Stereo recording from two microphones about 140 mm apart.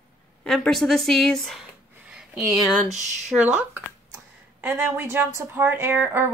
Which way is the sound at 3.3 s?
10° right (ahead or behind).